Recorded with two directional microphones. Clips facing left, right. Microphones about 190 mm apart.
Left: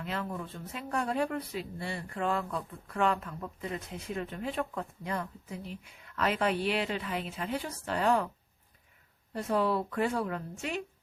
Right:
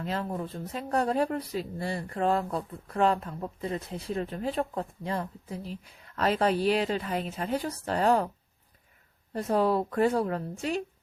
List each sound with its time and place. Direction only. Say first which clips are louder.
0.0 s speech: right 4 dB; 35° right (ahead or behind)
9.3 s speech: right 4 dB; 40° right (ahead or behind)